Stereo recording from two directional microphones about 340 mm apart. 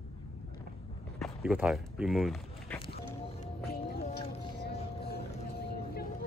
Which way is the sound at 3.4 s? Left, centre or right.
Left.